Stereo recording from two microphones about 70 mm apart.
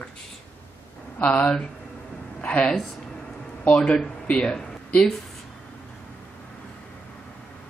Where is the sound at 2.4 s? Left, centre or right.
Left.